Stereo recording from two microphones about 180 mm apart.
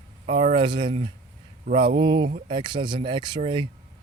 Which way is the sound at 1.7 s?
50° right (ahead or behind).